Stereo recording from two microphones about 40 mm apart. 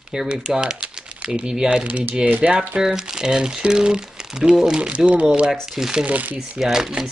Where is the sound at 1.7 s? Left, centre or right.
Right.